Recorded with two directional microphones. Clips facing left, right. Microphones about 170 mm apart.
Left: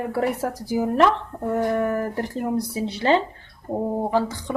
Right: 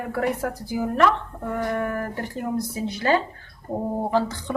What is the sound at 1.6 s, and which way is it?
Speech, 30° left (ahead or behind).